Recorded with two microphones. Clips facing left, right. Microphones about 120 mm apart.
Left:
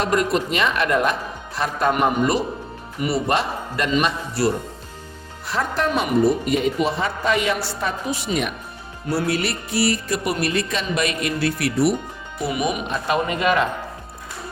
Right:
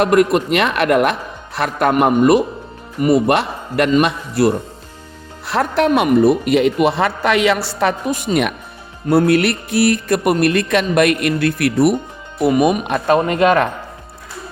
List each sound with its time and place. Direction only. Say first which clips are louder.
0.0 s speech: right 7 dB; 60° right (ahead or behind)
3.9 s a man's voice: right 6 dB; 50° right (ahead or behind)
5.5 s speech: right 7 dB; 70° right (ahead or behind); by 7.9 s 85° right
8.0 s a man's voice: right 6 dB; 50° right (ahead or behind)